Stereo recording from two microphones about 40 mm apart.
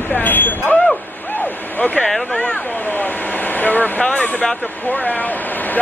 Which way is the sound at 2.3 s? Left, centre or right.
Left.